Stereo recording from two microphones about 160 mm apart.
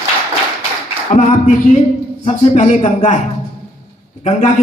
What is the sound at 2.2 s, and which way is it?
Speech, 40° left (ahead or behind).